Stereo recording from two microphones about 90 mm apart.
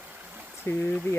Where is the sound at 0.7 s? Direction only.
30° left (ahead or behind).